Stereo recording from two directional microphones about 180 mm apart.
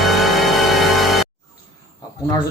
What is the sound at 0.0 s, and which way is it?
Music, centre (ahead or behind).